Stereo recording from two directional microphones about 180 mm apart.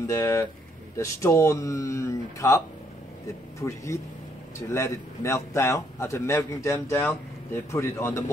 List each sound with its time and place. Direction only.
0.0 s a man's voice: 15° left (ahead or behind)